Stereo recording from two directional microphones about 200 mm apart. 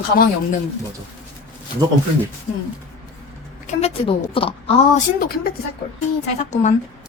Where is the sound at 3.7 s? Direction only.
30° left (ahead or behind).